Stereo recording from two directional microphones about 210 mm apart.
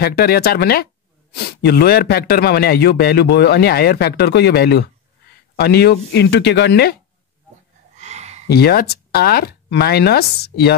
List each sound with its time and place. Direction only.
0.0 s a man's voice: 50° left (ahead or behind)
8.0 s a sound: 30° right (ahead or behind)
8.5 s a man's voice: 50° left (ahead or behind)